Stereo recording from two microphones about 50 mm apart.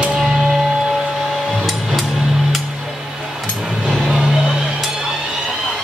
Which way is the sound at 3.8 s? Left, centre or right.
Centre.